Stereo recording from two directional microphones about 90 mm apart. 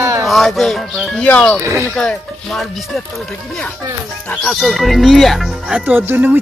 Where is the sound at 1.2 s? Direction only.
15° left (ahead or behind).